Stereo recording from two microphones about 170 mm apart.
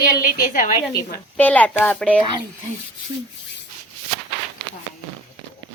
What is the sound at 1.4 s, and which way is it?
Speech, 10° left (ahead or behind).